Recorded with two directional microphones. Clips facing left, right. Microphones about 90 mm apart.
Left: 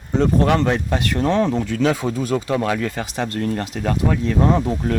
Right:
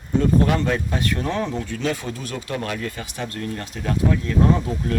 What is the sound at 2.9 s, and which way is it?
Speech, 90° left.